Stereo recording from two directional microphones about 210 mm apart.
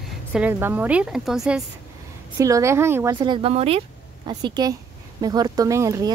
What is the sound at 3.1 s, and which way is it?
Speech, 20° right (ahead or behind).